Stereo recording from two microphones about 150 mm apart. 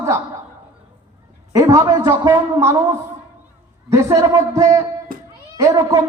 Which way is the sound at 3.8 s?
20° right (ahead or behind).